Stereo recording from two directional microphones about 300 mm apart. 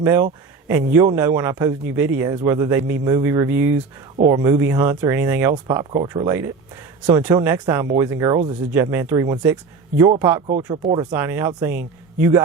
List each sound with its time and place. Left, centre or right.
0.0 s speech: centre